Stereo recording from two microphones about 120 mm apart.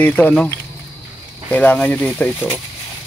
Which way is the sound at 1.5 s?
10° left (ahead or behind).